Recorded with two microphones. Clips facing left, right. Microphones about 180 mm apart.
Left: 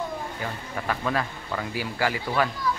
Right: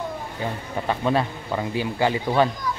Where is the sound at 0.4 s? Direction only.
25° right (ahead or behind).